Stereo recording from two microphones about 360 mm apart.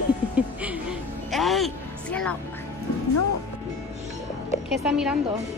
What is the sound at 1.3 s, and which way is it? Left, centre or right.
Music, centre.